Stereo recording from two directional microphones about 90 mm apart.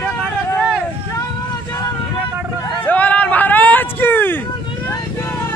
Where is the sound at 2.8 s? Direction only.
15° left (ahead or behind).